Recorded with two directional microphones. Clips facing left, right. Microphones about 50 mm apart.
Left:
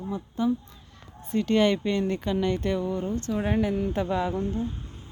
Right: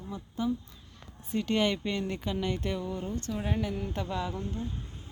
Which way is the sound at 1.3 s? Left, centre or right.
Left.